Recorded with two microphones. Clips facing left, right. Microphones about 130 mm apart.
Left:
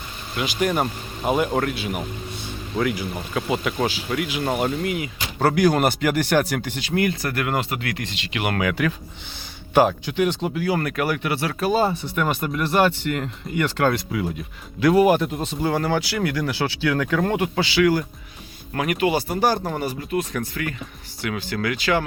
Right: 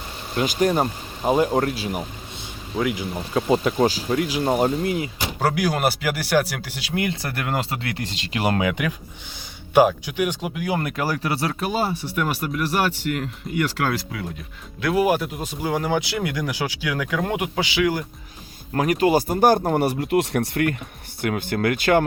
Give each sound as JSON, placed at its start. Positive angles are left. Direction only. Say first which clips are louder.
{"t": 0.3, "sound": "speech", "louder": "right 3 dB", "side_deg": -40}
{"t": 0.7, "sound": "speech", "louder": "right 1 dB", "side_deg": -25}
{"t": 2.7, "sound": "speech", "louder": "even", "side_deg": -20}
{"t": 3.5, "sound": "speech", "louder": "right 5 dB", "side_deg": -35}
{"t": 5.4, "sound": "speech", "louder": "left 4 dB", "side_deg": -5}
{"t": 6.9, "sound": "speech", "louder": "left 3 dB", "side_deg": -20}
{"t": 8.5, "sound": "speech", "louder": "even", "side_deg": -20}
{"t": 11.7, "sound": "speech", "louder": "left 3 dB", "side_deg": -10}
{"t": 18.7, "sound": "speech", "louder": "right 3 dB", "side_deg": -35}
{"t": 21.2, "sound": "speech", "louder": "right 3 dB", "side_deg": -50}